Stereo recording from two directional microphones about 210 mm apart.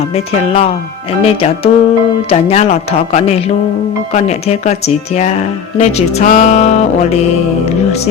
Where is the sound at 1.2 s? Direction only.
30° left (ahead or behind).